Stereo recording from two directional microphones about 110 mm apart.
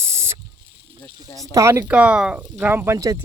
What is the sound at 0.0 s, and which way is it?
Mechanisms, 25° right (ahead or behind).